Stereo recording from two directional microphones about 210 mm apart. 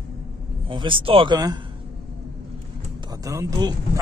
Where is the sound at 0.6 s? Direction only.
25° right (ahead or behind).